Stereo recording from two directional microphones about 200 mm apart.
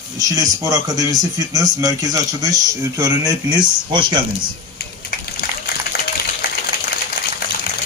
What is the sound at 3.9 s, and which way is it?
Speech, 25° right (ahead or behind).